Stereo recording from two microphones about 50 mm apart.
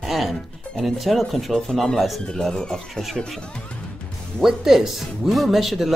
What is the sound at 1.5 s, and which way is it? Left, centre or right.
Speech, centre.